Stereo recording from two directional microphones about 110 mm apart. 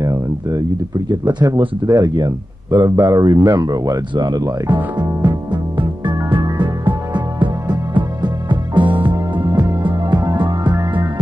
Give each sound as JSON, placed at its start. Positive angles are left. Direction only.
{"t": 0.0, "sound": "speech", "side_deg": -30}
{"t": 4.1, "sound": "speech", "side_deg": -45}
{"t": 4.9, "sound": "music", "side_deg": -45}